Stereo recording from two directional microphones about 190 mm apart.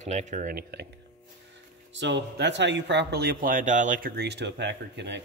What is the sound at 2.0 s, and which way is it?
Speech, 65° right (ahead or behind).